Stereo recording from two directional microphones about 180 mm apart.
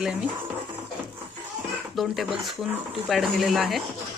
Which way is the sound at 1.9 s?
Centre (ahead or behind).